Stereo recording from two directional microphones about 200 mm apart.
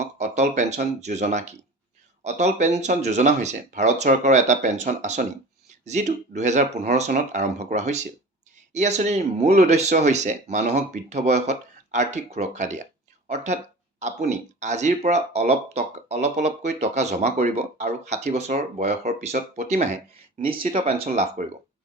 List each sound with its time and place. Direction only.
0.0 s speech: 35° right (ahead or behind)